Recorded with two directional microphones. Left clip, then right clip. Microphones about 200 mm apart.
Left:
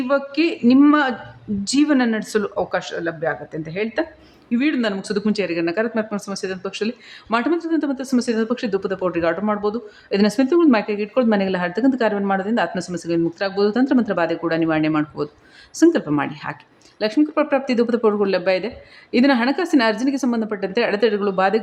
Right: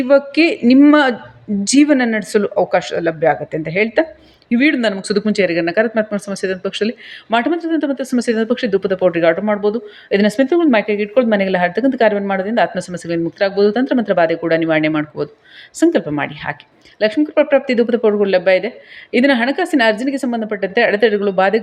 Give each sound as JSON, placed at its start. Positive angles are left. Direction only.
{"t": 0.1, "sound": "speech", "side_deg": -15}